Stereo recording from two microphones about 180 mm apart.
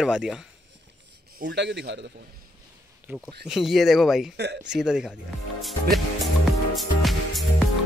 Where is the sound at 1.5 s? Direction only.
70° right (ahead or behind).